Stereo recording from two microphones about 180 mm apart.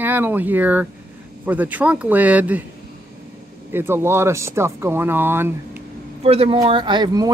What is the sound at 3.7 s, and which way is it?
Speech, 10° right (ahead or behind).